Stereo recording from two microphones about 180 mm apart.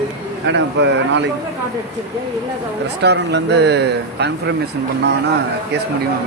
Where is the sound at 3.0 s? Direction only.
75° right (ahead or behind).